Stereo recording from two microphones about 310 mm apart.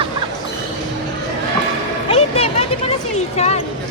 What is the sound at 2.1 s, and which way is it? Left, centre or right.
Music, centre.